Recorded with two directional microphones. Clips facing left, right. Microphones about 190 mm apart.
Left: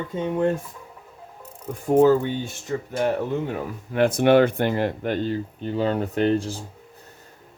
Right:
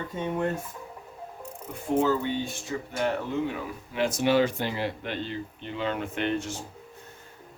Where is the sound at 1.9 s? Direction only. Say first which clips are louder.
Left 8 dB; 40° left (ahead or behind).